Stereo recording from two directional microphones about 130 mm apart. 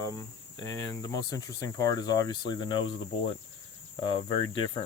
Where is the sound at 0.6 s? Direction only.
25° left (ahead or behind).